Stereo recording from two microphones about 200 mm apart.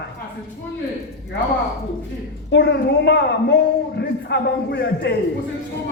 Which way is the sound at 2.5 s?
60° left (ahead or behind).